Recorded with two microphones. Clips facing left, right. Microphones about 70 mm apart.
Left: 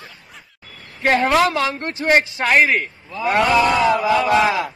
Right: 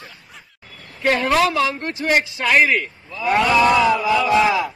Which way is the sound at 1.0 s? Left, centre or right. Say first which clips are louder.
Left 1 dB; left.